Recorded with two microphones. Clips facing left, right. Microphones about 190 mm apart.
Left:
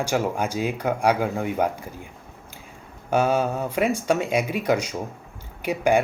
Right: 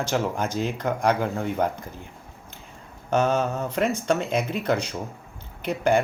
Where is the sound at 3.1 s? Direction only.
10° left (ahead or behind).